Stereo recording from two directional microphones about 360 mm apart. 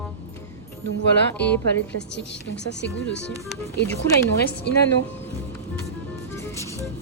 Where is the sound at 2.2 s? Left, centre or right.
Left.